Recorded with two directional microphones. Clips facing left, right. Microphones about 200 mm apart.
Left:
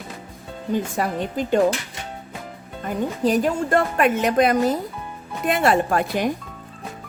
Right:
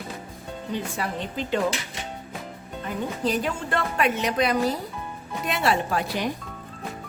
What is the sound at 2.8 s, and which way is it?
Speech, 45° left (ahead or behind).